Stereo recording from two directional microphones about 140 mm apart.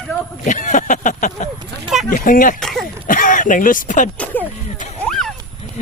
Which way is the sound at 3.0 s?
75° left (ahead or behind).